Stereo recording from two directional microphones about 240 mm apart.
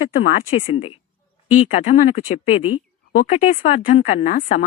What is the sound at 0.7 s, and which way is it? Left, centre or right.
Speech, left.